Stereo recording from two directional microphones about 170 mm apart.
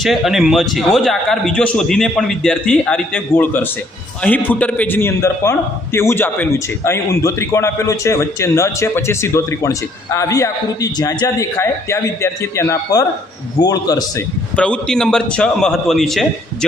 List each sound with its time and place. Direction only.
0.0 s a man's voice: centre (ahead or behind); by 14.3 s 20° left (ahead or behind)
14.5 s a man's voice: 5° left (ahead or behind)